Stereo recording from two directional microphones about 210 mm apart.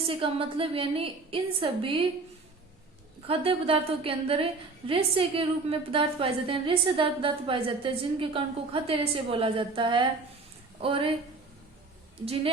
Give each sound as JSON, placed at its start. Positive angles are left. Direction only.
{"t": 0.1, "sound": "a woman's voice", "side_deg": -25}
{"t": 3.2, "sound": "a woman's voice", "side_deg": -25}